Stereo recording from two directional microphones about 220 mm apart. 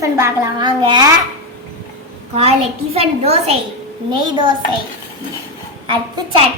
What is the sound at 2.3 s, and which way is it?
A child's voice, 25° right (ahead or behind).